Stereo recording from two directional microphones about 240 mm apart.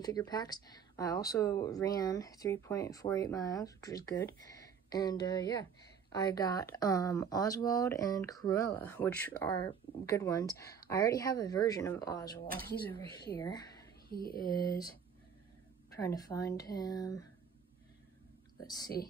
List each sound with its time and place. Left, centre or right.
0.0 s speech: centre
14.1 s speech: left
14.5 s speech: centre
16.0 s speech: centre